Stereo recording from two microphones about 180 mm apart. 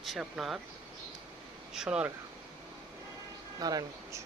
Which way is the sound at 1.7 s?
5° right (ahead or behind).